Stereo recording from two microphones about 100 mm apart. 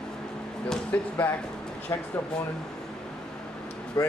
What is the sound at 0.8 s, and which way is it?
Speech, 15° left (ahead or behind).